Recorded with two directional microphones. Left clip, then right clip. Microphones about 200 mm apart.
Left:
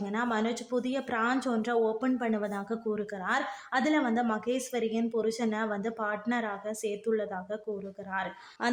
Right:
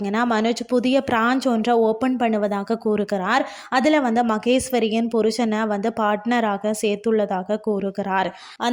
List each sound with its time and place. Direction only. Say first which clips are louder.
0.0 s speech: right 10 dB; 35° right (ahead or behind)